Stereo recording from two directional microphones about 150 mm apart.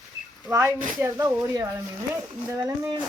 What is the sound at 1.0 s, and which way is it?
Speech, 20° right (ahead or behind).